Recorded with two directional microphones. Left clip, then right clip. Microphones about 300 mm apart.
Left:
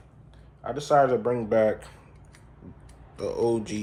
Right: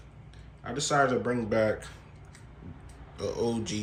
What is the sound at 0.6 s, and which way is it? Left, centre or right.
Speech, centre.